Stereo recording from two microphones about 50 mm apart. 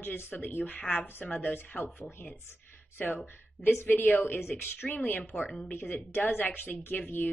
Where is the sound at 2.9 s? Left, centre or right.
Left.